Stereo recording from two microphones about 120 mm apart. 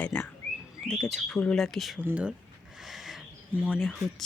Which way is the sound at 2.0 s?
10° right (ahead or behind).